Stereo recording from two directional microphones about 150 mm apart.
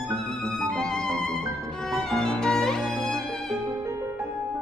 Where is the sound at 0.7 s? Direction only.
5° left (ahead or behind).